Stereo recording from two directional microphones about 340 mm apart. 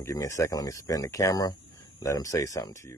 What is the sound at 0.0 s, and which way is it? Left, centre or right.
Speech, centre.